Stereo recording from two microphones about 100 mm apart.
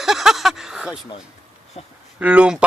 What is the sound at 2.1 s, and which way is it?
Speech, 15° right (ahead or behind).